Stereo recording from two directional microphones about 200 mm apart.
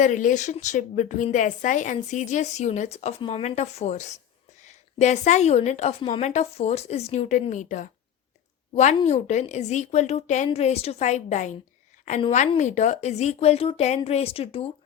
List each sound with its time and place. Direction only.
0.0 s a woman's voice: 40° left (ahead or behind)